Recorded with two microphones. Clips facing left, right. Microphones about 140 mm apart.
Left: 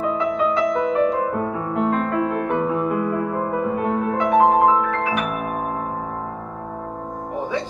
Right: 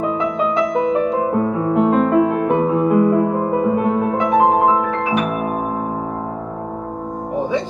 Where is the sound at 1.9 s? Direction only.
15° right (ahead or behind).